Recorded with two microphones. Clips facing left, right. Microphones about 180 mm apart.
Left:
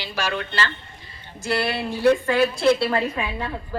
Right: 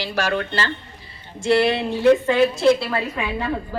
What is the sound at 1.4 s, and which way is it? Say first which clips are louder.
Speech: right 6 dB; 25° right (ahead or behind).